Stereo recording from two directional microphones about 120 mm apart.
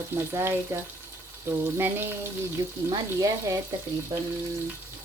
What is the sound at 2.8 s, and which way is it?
Speech, 30° right (ahead or behind).